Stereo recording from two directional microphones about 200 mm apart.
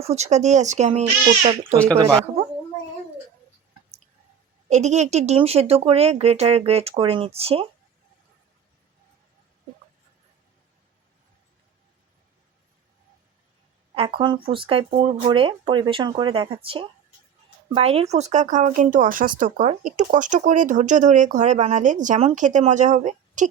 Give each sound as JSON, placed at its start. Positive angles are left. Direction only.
{"t": 0.0, "sound": "speech", "side_deg": -35}
{"t": 2.0, "sound": "speech", "side_deg": -20}
{"t": 4.7, "sound": "speech", "side_deg": -35}
{"t": 13.9, "sound": "speech", "side_deg": -25}